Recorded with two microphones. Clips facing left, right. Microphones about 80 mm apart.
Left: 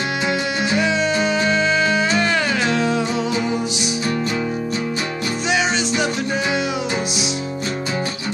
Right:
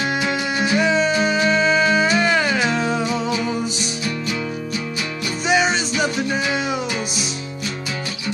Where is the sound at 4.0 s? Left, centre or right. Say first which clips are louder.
Left 4 dB; left.